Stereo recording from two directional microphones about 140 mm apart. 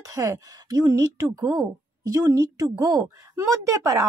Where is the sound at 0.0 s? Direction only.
25° right (ahead or behind).